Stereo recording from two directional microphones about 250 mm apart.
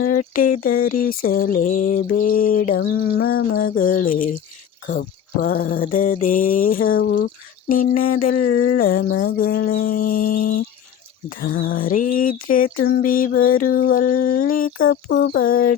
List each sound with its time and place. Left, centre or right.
0.0 s mantra: left
8.4 s a sound: left
8.8 s mantra: left